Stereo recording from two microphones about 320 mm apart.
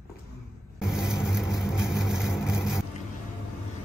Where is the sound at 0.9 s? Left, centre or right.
Centre.